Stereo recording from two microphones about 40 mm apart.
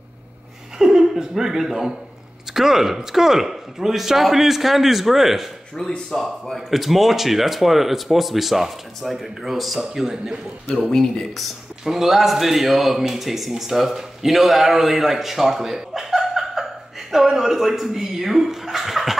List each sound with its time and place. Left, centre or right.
0.7 s speech: centre
5.8 s speech: centre
6.7 s speech: centre
11.3 s speech: centre